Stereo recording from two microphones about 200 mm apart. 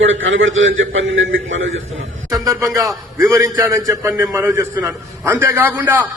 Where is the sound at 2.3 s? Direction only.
15° right (ahead or behind).